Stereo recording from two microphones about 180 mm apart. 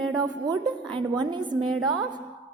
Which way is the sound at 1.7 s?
Centre (ahead or behind).